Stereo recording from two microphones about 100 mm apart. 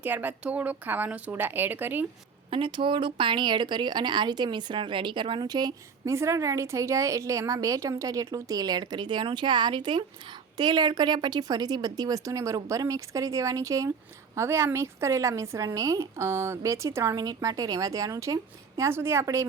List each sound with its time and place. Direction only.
0.0 s speech: 15° right (ahead or behind)
2.5 s speech: 60° right (ahead or behind); by 6.1 s 40° right (ahead or behind)
6.1 s a woman's voice: 30° right (ahead or behind)